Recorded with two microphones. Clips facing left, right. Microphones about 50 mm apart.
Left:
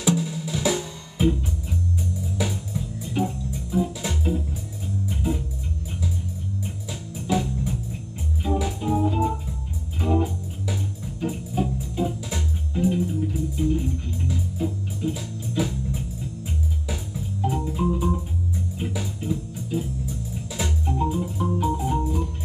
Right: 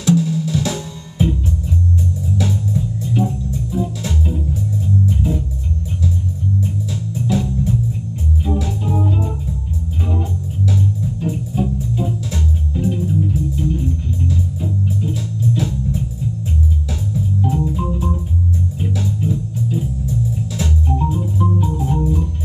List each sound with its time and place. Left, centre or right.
0.0 s drum: centre
2.3 s music: centre
7.2 s music: centre
10.7 s music: centre
17.1 s organ: centre
18.8 s music: centre
20.5 s organ: centre